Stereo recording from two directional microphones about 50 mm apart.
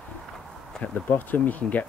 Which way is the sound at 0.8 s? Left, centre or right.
Left.